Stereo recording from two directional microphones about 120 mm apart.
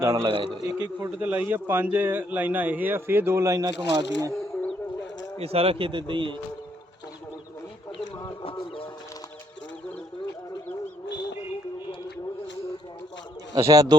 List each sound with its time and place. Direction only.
0.0 s a man's voice: 25° right (ahead or behind)
0.3 s speech: 45° right (ahead or behind)
0.9 s a man's voice: 15° right (ahead or behind)
3.7 s speech: 40° right (ahead or behind)
5.4 s speech: 55° right (ahead or behind)
8.4 s a sound: 45° left (ahead or behind)
13.5 s a man's voice: 25° right (ahead or behind)